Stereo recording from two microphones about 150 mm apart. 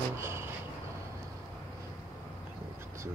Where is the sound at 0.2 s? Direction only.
15° right (ahead or behind).